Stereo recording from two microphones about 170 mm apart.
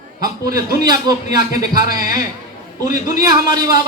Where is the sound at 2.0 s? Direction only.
55° left (ahead or behind).